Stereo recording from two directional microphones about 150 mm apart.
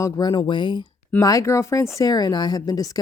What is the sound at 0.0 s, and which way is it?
Speech, 30° left (ahead or behind).